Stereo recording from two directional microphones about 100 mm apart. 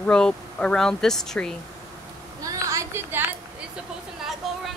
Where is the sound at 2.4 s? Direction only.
35° right (ahead or behind).